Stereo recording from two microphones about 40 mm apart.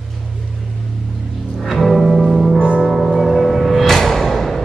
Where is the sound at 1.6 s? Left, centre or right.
Centre.